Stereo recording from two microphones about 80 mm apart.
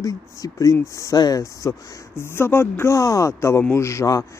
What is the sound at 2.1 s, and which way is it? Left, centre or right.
Speech, left.